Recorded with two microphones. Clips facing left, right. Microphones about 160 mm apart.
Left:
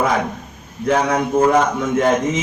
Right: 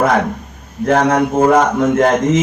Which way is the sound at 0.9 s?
60° right (ahead or behind).